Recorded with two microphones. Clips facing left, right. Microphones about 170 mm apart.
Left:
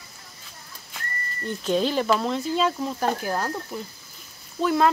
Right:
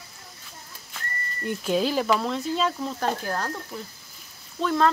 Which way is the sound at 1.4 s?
5° right (ahead or behind).